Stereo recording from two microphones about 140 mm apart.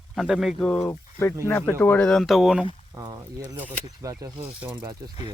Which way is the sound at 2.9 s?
25° right (ahead or behind).